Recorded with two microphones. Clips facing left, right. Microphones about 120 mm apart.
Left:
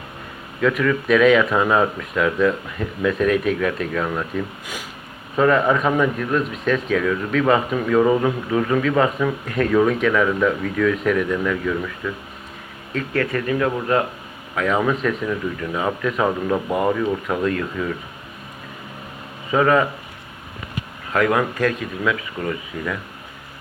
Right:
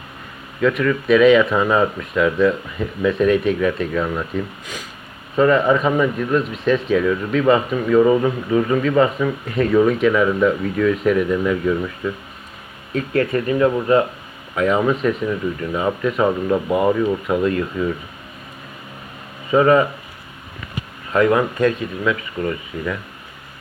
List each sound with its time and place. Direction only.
0.6 s speech: centre (ahead or behind)
4.6 s speech: 10° left (ahead or behind)
5.4 s speech: centre (ahead or behind)
13.3 s speech: 20° right (ahead or behind)
14.5 s speech: 5° right (ahead or behind)
19.5 s speech: 5° right (ahead or behind)
21.1 s speech: centre (ahead or behind)